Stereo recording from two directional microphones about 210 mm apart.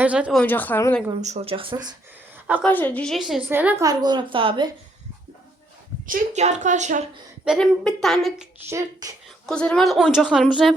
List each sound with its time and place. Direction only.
0.0 s speech: 5° right (ahead or behind)
0.4 s a woman's voice: 10° left (ahead or behind)
1.2 s speech: 30° right (ahead or behind)
2.6 s a woman's voice: 10° left (ahead or behind); by 4.7 s 25° right (ahead or behind)
6.1 s a woman's voice: 35° right (ahead or behind)
7.4 s speech: centre (ahead or behind)
8.7 s a woman's voice: 15° right (ahead or behind)
9.5 s speech: 5° left (ahead or behind)